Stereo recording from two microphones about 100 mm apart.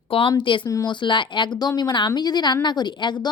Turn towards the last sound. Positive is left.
turn(degrees=50)  # may be behind; listen again after turning